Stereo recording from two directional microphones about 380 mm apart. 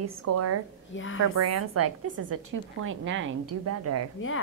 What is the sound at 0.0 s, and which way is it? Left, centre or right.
Speech, right.